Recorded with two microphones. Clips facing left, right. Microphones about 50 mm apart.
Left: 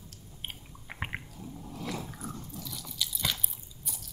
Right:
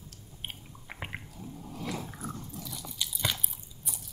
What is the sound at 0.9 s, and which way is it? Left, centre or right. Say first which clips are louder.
Squish: left 3 dB; centre.